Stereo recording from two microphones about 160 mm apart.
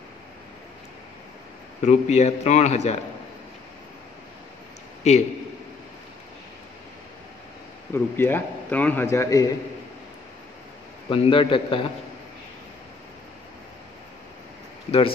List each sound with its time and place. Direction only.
1.8 s a man's voice: 45° left (ahead or behind)
5.1 s a man's voice: 45° left (ahead or behind)
7.9 s a man's voice: 15° left (ahead or behind)
11.1 s a man's voice: 35° left (ahead or behind)